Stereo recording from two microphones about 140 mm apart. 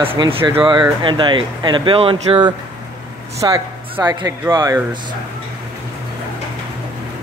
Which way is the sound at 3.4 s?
20° right (ahead or behind).